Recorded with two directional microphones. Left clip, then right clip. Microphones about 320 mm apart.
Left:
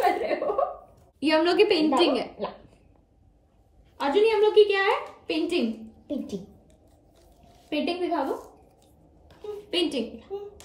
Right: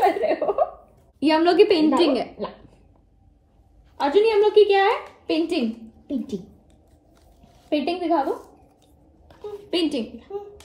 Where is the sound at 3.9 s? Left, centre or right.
Centre.